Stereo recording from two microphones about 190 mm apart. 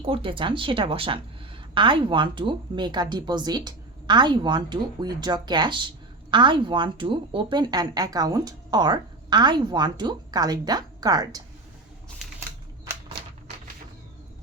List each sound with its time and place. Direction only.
0.0 s a woman's voice: 30° right (ahead or behind)